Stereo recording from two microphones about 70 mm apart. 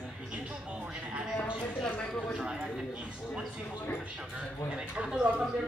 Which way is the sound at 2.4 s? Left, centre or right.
Centre.